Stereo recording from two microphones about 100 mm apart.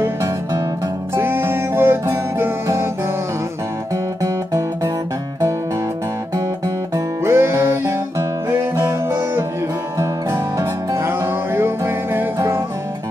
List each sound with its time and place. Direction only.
1.1 s music: 20° right (ahead or behind)
3.9 s music: 35° right (ahead or behind)
7.2 s music: 25° right (ahead or behind)